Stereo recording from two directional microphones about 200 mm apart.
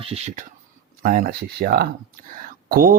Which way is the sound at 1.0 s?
45° right (ahead or behind).